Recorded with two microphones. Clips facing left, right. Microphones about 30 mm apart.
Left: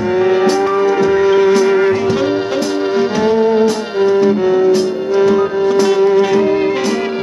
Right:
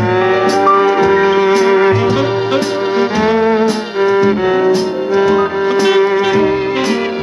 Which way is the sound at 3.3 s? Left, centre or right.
Right.